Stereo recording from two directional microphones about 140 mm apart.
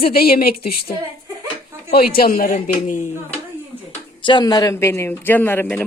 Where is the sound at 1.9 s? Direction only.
90° left; by 3.1 s 65° left (ahead or behind).